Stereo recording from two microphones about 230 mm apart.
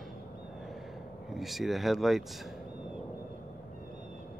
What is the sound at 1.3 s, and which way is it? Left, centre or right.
Speech, centre.